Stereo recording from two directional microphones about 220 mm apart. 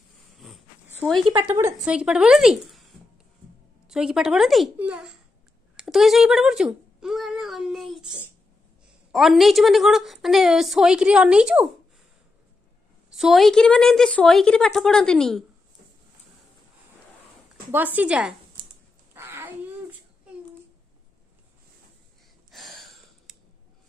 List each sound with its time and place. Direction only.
0.4 s wheeze: centre (ahead or behind)
1.1 s speech: 25° right (ahead or behind)
1.4 s a woman's voice: 10° right (ahead or behind)
3.8 s a woman's voice: 5° right (ahead or behind)
5.8 s a sound: centre (ahead or behind)
9.1 s a woman's voice: centre (ahead or behind)
13.1 s a woman's voice: centre (ahead or behind)
17.6 s a woman's voice: 10° right (ahead or behind)
19.1 s a sound: 10° right (ahead or behind)
22.5 s a sound: centre (ahead or behind)